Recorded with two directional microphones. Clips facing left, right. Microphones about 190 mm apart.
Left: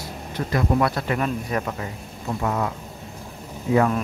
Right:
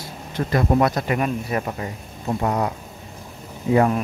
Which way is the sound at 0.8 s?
15° right (ahead or behind).